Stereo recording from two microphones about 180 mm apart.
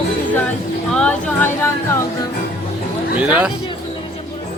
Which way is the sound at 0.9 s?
5° left (ahead or behind).